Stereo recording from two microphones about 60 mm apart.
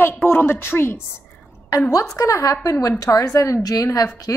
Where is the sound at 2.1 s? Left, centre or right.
Left.